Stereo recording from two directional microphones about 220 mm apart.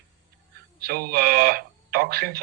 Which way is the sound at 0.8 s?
45° right (ahead or behind).